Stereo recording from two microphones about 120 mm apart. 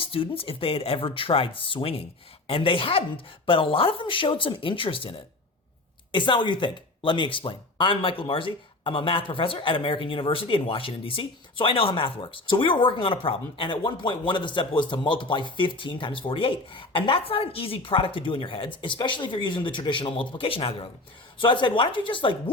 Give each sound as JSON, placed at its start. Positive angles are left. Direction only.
{"t": 0.0, "sound": "speech", "side_deg": 50}